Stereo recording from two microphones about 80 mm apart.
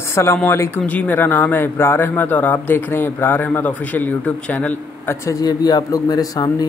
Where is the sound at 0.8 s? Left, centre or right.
Centre.